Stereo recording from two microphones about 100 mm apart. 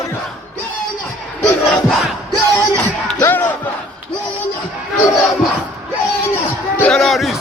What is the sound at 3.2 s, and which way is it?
Battle cry, 20° left (ahead or behind).